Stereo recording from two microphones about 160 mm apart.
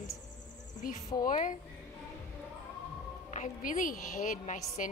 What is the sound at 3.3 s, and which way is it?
A woman's voice, 50° left (ahead or behind).